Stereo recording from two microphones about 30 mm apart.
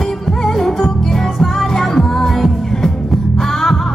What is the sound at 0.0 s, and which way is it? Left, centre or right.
Music, centre.